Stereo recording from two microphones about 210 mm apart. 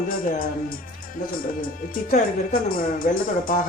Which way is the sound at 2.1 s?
40° left (ahead or behind).